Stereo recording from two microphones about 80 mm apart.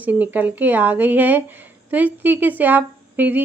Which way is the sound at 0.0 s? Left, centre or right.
Right.